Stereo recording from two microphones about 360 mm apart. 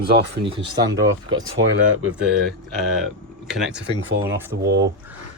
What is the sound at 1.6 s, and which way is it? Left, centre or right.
Speech, right.